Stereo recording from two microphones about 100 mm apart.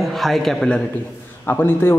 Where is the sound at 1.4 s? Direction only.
20° left (ahead or behind).